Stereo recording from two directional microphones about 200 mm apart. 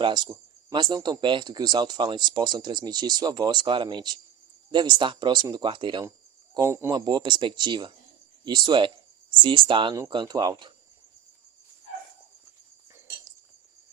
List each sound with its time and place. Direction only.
0.0 s speech: 20° right (ahead or behind)